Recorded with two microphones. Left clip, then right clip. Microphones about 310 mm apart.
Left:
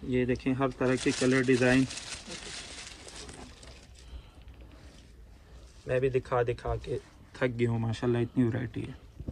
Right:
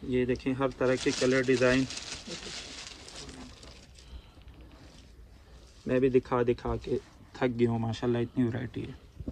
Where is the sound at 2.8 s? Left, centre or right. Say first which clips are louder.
Right 1 dB; centre.